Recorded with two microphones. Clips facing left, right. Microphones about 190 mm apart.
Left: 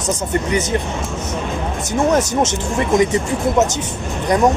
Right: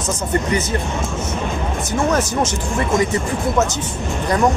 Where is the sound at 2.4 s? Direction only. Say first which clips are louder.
Left 2 dB; 20° left (ahead or behind).